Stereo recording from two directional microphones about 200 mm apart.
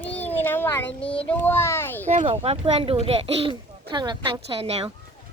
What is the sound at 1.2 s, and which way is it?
Speech, 10° left (ahead or behind).